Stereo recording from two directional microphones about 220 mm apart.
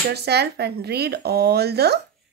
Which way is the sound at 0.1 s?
50° right (ahead or behind).